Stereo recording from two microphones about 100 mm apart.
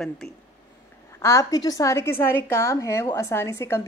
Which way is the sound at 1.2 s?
30° left (ahead or behind).